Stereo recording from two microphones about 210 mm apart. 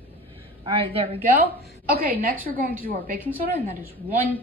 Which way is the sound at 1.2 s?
45° right (ahead or behind).